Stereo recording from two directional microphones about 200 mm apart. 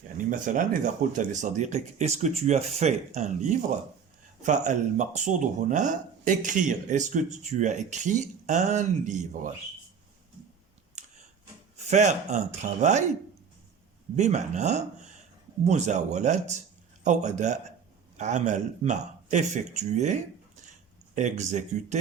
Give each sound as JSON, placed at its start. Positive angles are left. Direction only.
{"t": 0.3, "sound": "speech", "side_deg": -40}
{"t": 11.0, "sound": "a sound", "side_deg": -35}
{"t": 11.9, "sound": "speech", "side_deg": -35}
{"t": 14.2, "sound": "speech", "side_deg": -35}